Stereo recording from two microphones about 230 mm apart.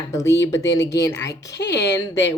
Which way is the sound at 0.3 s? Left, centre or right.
Left.